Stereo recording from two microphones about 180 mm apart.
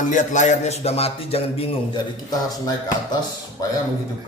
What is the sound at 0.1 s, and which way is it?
A man's voice, 40° left (ahead or behind).